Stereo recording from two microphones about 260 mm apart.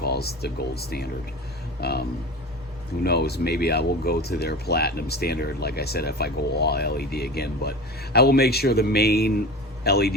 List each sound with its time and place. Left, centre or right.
0.0 s speech: left